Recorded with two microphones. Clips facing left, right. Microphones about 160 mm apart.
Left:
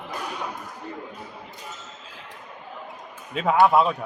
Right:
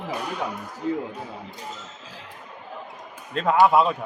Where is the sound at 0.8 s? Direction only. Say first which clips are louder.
Right 12 dB; 90° right.